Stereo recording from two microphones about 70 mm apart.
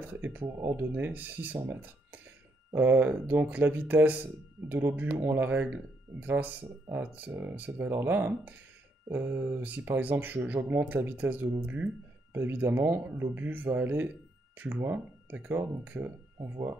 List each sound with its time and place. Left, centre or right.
0.1 s speech: right
0.6 s speech: right
0.9 s speech: right
2.7 s speech: right
16.3 s speech: right